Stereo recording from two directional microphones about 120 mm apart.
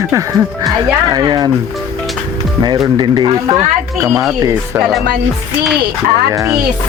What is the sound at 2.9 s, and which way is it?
Speech, 35° right (ahead or behind).